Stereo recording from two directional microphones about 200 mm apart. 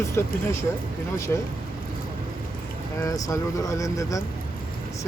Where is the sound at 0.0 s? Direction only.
15° left (ahead or behind).